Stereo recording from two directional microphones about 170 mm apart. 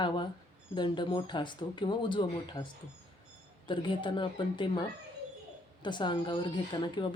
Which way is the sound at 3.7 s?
30° left (ahead or behind).